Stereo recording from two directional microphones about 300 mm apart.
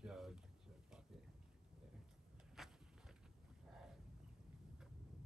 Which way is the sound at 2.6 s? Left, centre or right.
Centre.